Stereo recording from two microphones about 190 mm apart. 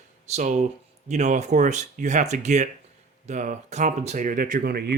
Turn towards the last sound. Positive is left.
turn(degrees=-55)  # may be behind; listen again after turning